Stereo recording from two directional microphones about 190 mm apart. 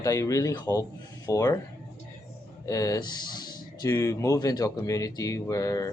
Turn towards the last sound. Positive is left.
turn(degrees=15)  # may be behind; listen again after turning